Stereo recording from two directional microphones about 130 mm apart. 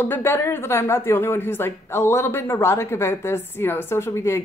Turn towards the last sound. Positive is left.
turn(degrees=20)  # may be behind; listen again after turning